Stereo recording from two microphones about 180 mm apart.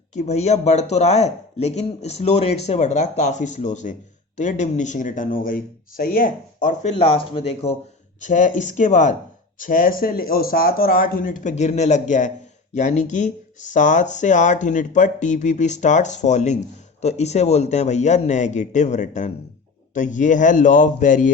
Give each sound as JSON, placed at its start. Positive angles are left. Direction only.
{"t": 0.1, "sound": "speech", "side_deg": 40}
{"t": 6.9, "sound": "speech", "side_deg": 30}
{"t": 8.2, "sound": "speech", "side_deg": 45}